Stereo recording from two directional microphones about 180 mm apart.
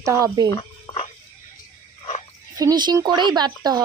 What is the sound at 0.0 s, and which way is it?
Speech, 15° right (ahead or behind).